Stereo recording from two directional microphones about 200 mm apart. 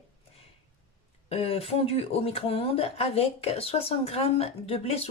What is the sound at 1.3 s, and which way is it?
Speech, 30° left (ahead or behind).